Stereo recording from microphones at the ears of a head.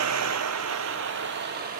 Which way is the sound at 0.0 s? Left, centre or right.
Right.